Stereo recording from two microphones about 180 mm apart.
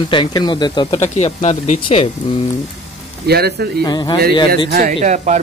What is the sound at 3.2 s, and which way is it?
Speech, 60° right (ahead or behind).